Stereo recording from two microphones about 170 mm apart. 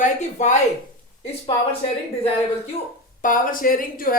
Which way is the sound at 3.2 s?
55° left (ahead or behind).